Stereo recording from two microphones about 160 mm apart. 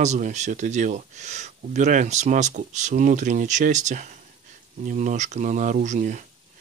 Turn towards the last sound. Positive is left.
turn(degrees=-50)  # may be behind; listen again after turning